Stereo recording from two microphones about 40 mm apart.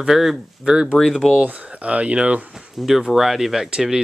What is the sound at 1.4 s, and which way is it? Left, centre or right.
Speech, right.